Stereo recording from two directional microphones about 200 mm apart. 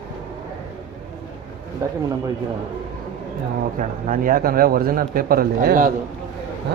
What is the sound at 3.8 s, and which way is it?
Speech, 45° right (ahead or behind).